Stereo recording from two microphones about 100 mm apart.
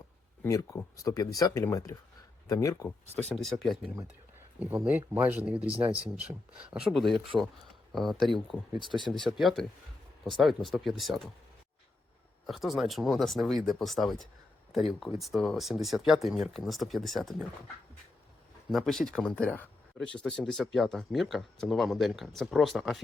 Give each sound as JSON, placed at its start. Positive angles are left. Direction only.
{"t": 0.4, "sound": "speech", "side_deg": 30}
{"t": 3.2, "sound": "speech", "side_deg": 0}
{"t": 4.6, "sound": "speech", "side_deg": -20}
{"t": 12.5, "sound": "speech", "side_deg": 0}
{"t": 18.7, "sound": "speech", "side_deg": 0}